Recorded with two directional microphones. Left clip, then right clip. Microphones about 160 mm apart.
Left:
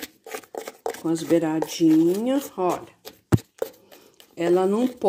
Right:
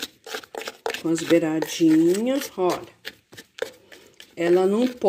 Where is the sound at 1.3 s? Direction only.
Centre (ahead or behind).